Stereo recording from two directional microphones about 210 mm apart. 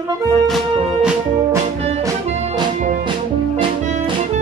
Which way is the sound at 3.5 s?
25° right (ahead or behind).